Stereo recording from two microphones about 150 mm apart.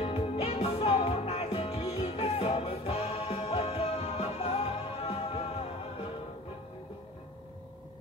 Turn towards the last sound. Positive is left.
turn(degrees=40)  # may be behind; listen again after turning